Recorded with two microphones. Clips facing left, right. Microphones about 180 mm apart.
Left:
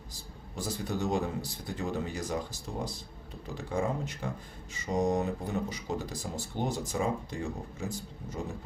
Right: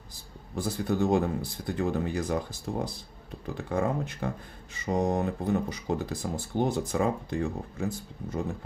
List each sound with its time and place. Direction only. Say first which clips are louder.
0.5 s speech: right 5 dB; 55° right (ahead or behind)